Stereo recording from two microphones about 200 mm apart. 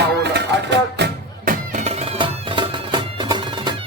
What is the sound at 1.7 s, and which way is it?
Music, 35° right (ahead or behind).